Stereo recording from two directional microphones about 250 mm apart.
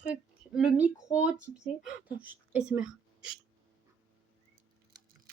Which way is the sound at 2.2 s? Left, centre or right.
Centre.